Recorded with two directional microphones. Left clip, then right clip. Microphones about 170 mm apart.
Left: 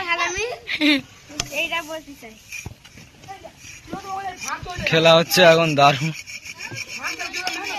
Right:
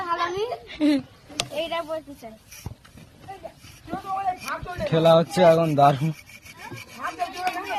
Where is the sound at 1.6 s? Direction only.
90° right.